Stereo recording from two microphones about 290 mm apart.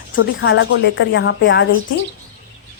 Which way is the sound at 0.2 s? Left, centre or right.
Left.